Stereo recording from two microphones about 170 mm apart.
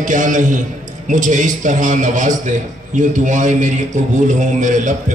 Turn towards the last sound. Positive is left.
turn(degrees=-45)  # may be behind; listen again after turning